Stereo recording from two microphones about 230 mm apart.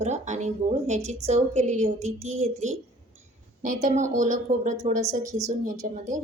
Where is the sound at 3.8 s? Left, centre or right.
Right.